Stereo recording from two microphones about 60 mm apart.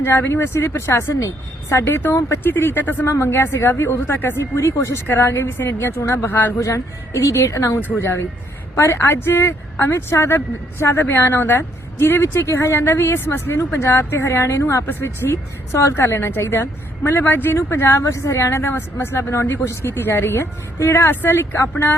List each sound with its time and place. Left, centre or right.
0.0 s a woman's voice: left
3.1 s a woman's voice: left
6.6 s a woman's voice: left
7.8 s a woman's voice: left
14.8 s a woman's voice: left
17.9 s a woman's voice: left
18.6 s speech: left